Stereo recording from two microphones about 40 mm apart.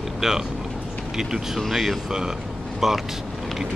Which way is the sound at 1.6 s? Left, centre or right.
Centre.